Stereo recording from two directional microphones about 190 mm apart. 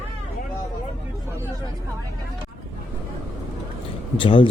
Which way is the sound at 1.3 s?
15° right (ahead or behind).